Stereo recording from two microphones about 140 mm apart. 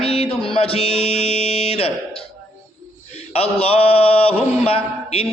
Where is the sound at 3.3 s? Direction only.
45° left (ahead or behind).